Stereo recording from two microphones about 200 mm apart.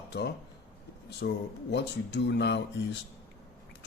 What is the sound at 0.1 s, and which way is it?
Speech, 55° left (ahead or behind).